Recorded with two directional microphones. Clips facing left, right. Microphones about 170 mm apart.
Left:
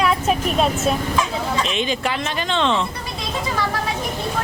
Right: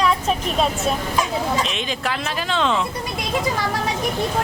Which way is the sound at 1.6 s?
Centre (ahead or behind).